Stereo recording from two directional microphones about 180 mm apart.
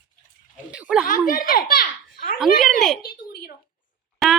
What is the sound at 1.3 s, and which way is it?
A child's voice, 50° left (ahead or behind).